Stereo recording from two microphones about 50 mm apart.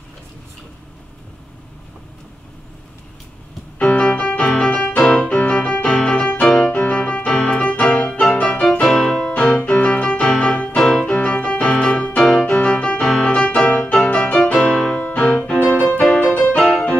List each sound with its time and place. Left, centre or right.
3.9 s music: left
9.8 s piano: left
10.8 s music: centre